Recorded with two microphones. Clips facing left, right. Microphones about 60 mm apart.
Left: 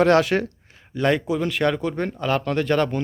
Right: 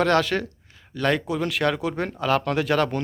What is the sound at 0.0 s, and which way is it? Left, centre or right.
Speech, left.